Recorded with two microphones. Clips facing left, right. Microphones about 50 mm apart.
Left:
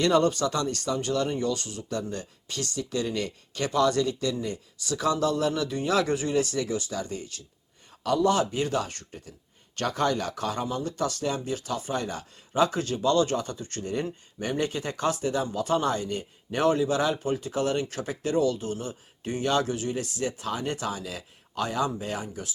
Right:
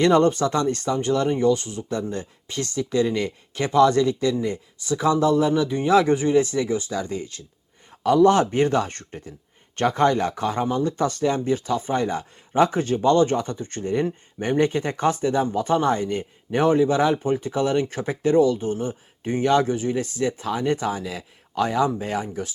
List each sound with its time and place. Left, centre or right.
0.0 s speech: right